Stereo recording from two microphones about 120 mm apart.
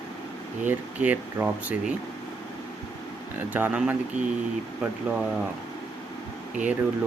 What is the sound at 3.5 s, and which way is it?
Speech, 15° right (ahead or behind).